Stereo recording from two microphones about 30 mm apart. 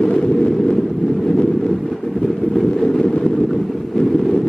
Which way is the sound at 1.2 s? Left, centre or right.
Centre.